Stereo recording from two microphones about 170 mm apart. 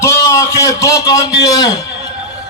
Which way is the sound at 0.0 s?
15° left (ahead or behind).